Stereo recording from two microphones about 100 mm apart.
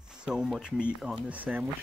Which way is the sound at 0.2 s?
5° right (ahead or behind).